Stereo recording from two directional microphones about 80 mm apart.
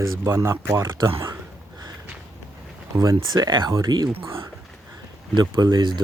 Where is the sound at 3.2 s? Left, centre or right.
Right.